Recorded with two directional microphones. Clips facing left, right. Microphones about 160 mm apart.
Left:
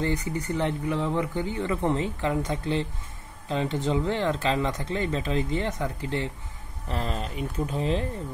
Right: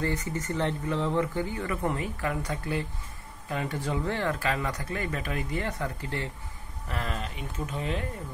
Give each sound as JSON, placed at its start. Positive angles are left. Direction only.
{"t": 0.0, "sound": "speech", "side_deg": 15}
{"t": 6.9, "sound": "speech", "side_deg": 30}